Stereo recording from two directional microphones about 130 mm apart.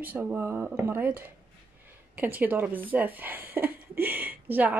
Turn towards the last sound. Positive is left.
turn(degrees=-15)  # may be behind; listen again after turning